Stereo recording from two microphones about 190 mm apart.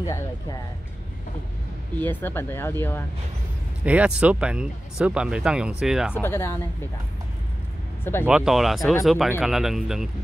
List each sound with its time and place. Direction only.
0.0 s speech: 20° left (ahead or behind)
2.0 s speech: 10° left (ahead or behind)
3.8 s speech: 5° right (ahead or behind)
6.1 s speech: 15° left (ahead or behind)
8.0 s speech: 10° left (ahead or behind)
8.3 s speech: 5° right (ahead or behind)